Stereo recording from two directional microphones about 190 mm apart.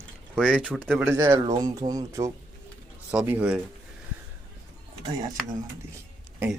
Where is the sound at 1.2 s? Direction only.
20° right (ahead or behind).